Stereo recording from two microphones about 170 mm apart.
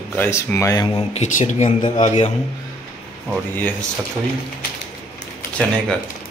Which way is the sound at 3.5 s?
10° left (ahead or behind).